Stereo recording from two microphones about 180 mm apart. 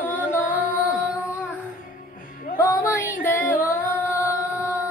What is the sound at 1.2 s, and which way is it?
Music, 5° right (ahead or behind).